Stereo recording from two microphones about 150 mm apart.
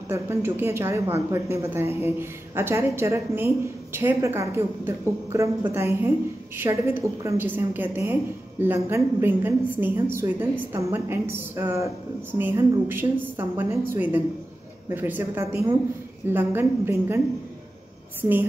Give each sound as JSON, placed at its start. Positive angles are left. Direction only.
{"t": 0.1, "sound": "speech", "side_deg": -20}